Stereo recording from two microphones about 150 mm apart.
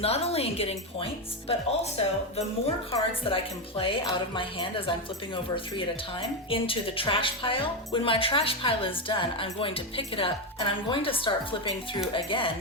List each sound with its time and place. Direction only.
0.0 s speech: 40° left (ahead or behind)